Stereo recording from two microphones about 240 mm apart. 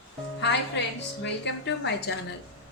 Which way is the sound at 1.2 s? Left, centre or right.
Left.